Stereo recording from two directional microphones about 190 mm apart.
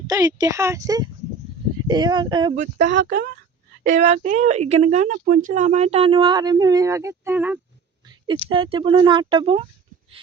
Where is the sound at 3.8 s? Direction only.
40° right (ahead or behind); by 7.6 s 10° right (ahead or behind).